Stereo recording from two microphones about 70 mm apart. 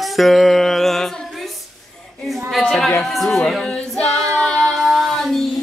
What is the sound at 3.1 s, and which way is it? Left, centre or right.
Music, centre.